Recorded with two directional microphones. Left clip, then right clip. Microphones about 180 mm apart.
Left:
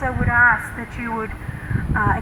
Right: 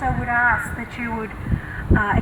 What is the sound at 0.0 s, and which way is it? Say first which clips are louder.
Speech: left 3 dB; 50° right (ahead or behind).